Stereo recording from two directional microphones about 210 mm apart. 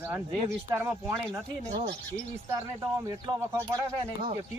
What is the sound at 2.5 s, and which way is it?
Speech, 15° right (ahead or behind).